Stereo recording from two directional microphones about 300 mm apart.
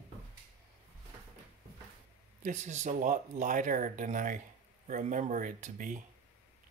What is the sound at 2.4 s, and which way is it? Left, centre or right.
Speech, right.